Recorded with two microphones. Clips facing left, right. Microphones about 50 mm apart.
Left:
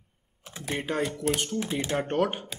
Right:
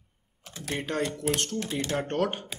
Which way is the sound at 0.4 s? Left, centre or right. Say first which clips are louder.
Left 1 dB; centre.